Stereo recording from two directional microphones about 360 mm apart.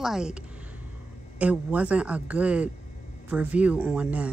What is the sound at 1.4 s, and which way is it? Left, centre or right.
A woman's voice, centre.